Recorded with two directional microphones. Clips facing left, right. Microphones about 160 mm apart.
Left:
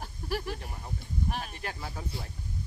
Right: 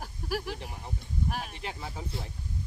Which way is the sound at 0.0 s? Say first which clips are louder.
Even; 5° right (ahead or behind).